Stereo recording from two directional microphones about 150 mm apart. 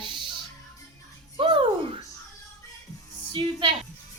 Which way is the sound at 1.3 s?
35° right (ahead or behind).